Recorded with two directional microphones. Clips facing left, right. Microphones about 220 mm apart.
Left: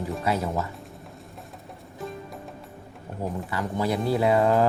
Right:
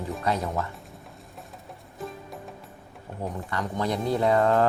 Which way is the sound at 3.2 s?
5° left (ahead or behind).